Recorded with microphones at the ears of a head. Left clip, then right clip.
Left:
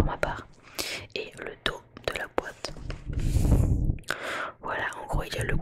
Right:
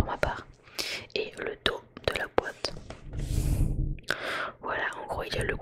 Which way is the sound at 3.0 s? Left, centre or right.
Left.